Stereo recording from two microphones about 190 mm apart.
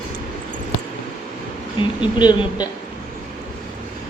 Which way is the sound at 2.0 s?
25° left (ahead or behind).